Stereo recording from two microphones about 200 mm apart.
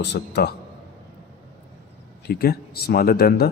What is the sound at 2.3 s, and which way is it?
A man's voice, 50° left (ahead or behind).